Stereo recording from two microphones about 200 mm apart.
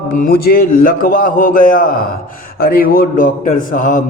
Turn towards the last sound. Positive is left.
turn(degrees=40)  # may be behind; listen again after turning